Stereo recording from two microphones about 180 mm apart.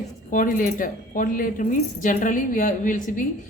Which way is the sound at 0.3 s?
50° left (ahead or behind).